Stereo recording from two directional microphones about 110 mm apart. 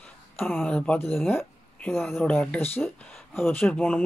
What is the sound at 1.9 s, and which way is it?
Speech, centre (ahead or behind).